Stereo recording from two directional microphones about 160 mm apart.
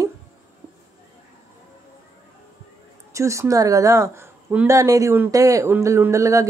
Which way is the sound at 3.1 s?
20° right (ahead or behind).